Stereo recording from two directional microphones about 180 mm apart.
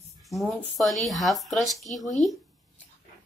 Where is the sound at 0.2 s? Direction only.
Centre (ahead or behind).